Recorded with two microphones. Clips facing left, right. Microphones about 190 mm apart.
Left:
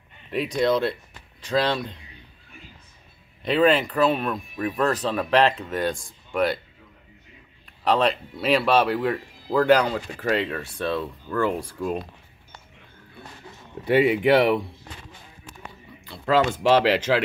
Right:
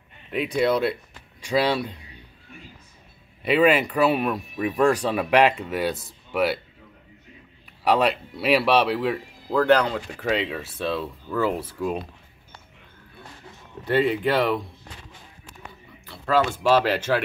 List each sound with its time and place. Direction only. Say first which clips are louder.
0.6 s speech: even; 5° right (ahead or behind)
3.4 s speech: right 1 dB; 10° right (ahead or behind)
7.6 s speech: right 1 dB; 10° right (ahead or behind)
13.8 s speech: left 3 dB; 10° left (ahead or behind)
16.6 s speech: left 2 dB; 15° left (ahead or behind)